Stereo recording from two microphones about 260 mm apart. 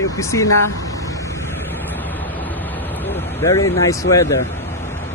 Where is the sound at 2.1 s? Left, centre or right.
Centre.